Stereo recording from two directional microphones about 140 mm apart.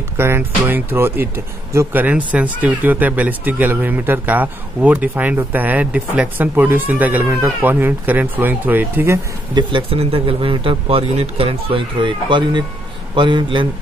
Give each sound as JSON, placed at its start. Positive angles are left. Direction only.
{"t": 0.2, "sound": "speech", "side_deg": -15}
{"t": 9.6, "sound": "speech", "side_deg": -35}